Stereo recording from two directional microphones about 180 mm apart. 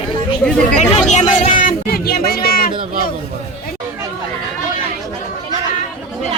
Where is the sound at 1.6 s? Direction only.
55° left (ahead or behind).